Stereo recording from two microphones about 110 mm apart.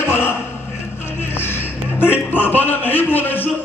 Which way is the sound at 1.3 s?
20° left (ahead or behind).